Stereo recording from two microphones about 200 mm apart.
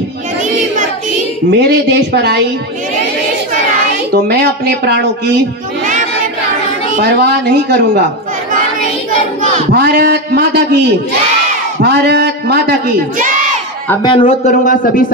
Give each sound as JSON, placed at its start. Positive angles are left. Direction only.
{"t": 1.5, "sound": "speech", "side_deg": -55}
{"t": 4.1, "sound": "speech", "side_deg": -50}
{"t": 7.0, "sound": "speech", "side_deg": -55}
{"t": 9.7, "sound": "speech", "side_deg": -50}
{"t": 11.8, "sound": "speech", "side_deg": -55}
{"t": 14.0, "sound": "a man's voice", "side_deg": 25}
{"t": 14.5, "sound": "speech", "side_deg": 40}